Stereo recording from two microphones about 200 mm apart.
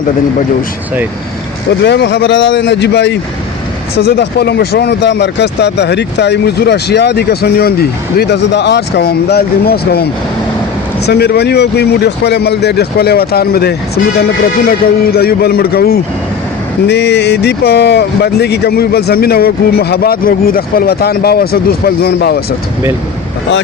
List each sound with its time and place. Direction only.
1.8 s speech: 60° left (ahead or behind)